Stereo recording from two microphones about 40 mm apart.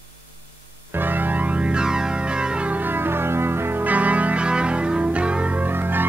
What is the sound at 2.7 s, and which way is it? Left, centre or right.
Music, right.